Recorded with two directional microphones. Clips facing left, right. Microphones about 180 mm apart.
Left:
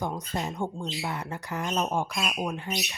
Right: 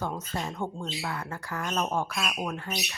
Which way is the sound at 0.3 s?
15° left (ahead or behind).